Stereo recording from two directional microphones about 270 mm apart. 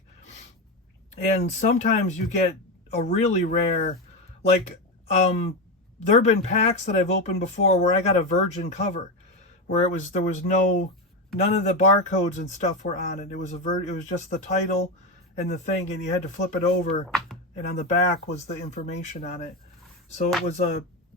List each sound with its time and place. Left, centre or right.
1.1 s speech: left
17.1 s a sound: centre
17.5 s speech: left